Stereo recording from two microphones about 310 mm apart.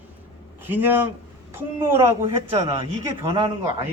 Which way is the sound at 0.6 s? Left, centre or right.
Centre.